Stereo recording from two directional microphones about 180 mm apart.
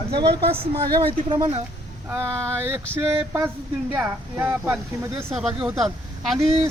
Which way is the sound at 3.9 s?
10° right (ahead or behind).